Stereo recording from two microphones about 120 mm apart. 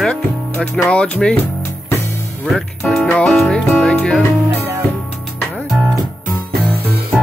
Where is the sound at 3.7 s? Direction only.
10° left (ahead or behind).